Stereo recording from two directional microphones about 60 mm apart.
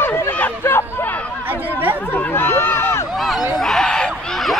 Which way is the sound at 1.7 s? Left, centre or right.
Right.